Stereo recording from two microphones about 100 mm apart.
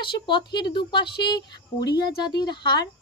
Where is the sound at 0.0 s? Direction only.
55° left (ahead or behind).